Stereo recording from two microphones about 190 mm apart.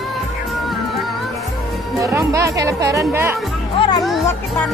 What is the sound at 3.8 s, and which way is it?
Music, 20° left (ahead or behind).